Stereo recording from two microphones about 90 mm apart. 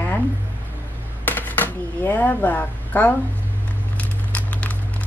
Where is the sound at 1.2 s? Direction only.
20° left (ahead or behind).